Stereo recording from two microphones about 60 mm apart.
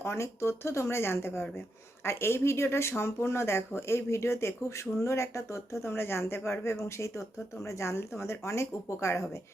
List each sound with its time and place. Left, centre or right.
0.0 s speech: left
5.8 s speech: left